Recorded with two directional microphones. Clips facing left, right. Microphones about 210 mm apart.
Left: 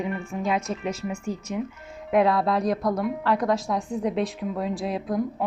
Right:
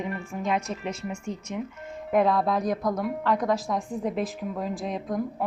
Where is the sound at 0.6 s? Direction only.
30° right (ahead or behind).